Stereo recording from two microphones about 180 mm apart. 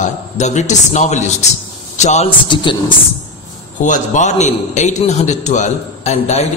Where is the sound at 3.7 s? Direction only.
45° left (ahead or behind).